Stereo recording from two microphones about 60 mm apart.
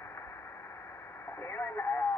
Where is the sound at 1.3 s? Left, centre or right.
Left.